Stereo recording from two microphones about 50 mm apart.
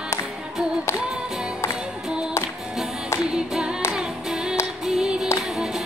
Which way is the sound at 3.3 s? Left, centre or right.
Centre.